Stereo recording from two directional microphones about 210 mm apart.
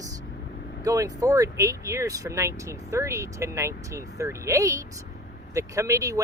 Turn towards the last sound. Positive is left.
turn(degrees=-15)  # may be behind; listen again after turning